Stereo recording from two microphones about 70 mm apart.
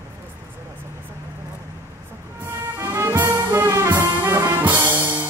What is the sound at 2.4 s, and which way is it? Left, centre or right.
Music, right.